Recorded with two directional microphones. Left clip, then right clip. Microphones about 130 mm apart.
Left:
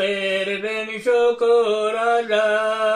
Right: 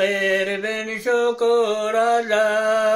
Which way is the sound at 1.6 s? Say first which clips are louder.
Even; 25° right (ahead or behind).